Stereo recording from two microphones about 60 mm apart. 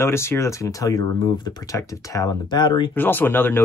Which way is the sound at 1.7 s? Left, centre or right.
Left.